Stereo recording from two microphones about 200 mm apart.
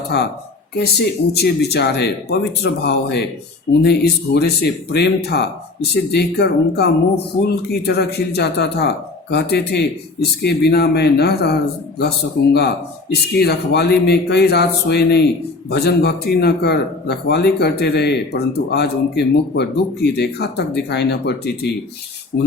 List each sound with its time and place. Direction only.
0.7 s speech: 55° left (ahead or behind)
13.4 s speech: 55° left (ahead or behind)